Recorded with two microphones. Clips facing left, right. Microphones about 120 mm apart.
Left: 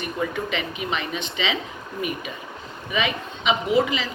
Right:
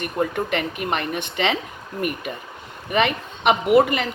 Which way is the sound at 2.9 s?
60° right (ahead or behind).